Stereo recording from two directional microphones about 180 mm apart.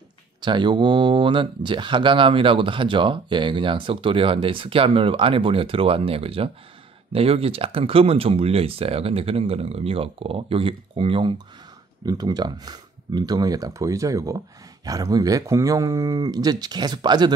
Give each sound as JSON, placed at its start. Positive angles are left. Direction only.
{"t": 0.4, "sound": "speech", "side_deg": -25}